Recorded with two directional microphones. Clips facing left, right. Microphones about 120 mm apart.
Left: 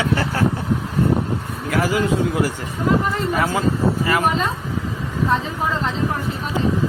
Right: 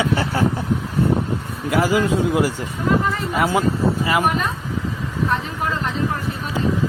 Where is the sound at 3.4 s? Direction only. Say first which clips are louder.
Right 5 dB; 15° right (ahead or behind).